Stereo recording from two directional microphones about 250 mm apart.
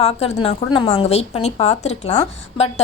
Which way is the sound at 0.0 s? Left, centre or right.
Left.